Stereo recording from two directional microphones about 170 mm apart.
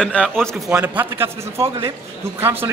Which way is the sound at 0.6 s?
10° right (ahead or behind).